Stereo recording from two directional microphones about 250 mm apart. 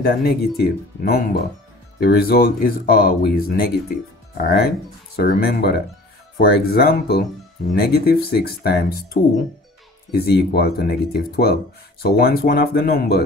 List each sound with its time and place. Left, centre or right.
0.0 s speech: left